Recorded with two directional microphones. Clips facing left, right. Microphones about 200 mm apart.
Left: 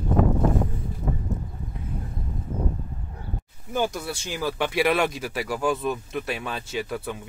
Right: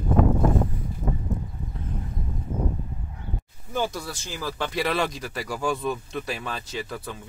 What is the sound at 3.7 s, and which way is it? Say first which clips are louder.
Speech: left 2 dB; 15° left (ahead or behind).